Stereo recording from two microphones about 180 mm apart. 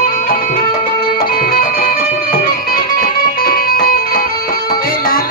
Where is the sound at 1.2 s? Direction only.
55° left (ahead or behind).